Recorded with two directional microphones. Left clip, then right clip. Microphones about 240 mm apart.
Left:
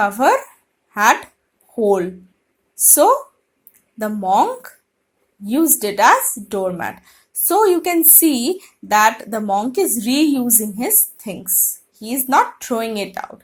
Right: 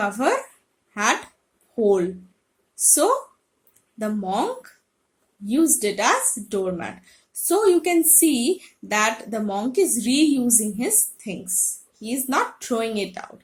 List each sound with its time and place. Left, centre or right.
0.0 s speech: centre
1.8 s speech: centre
5.5 s speech: centre